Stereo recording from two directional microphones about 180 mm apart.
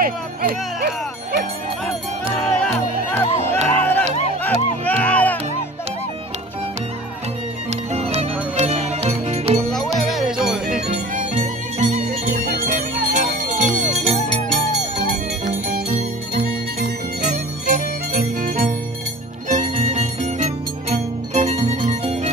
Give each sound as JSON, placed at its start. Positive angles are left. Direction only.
{"t": 0.0, "sound": "music", "side_deg": -55}
{"t": 2.4, "sound": "music", "side_deg": 5}
{"t": 7.9, "sound": "music", "side_deg": -35}
{"t": 9.9, "sound": "music", "side_deg": 0}
{"t": 11.1, "sound": "music", "side_deg": -45}
{"t": 15.0, "sound": "music", "side_deg": -50}